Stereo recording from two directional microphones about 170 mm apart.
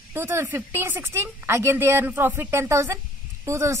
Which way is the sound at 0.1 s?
15° right (ahead or behind).